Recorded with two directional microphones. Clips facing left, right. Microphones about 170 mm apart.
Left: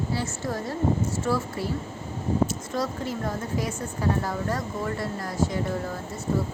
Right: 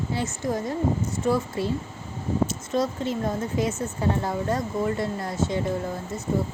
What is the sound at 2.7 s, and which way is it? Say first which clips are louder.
Speech: right 4 dB; 20° right (ahead or behind).